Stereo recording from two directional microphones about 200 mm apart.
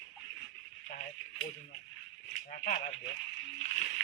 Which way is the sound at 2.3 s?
45° left (ahead or behind).